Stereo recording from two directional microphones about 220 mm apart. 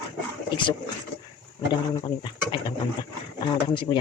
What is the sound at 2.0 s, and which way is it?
Speech, 20° left (ahead or behind).